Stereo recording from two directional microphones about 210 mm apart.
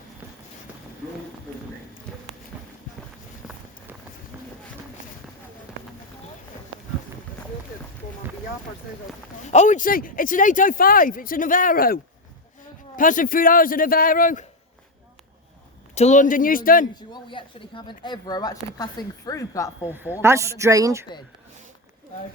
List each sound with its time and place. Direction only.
9.5 s speech: 35° left (ahead or behind)
13.0 s speech: 40° left (ahead or behind)
16.0 s speech: 35° left (ahead or behind)
16.9 s a woman's voice: 20° left (ahead or behind)
20.2 s speech: 15° right (ahead or behind)